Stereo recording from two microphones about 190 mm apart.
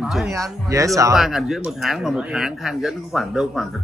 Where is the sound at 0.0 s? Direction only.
5° right (ahead or behind).